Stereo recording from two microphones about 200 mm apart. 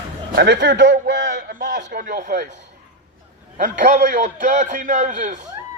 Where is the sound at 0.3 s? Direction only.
60° right (ahead or behind).